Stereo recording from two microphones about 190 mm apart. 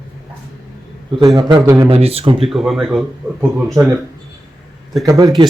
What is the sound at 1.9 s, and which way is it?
Speech, 30° right (ahead or behind).